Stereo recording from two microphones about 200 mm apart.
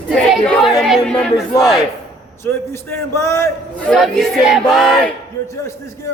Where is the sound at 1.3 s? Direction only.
15° left (ahead or behind).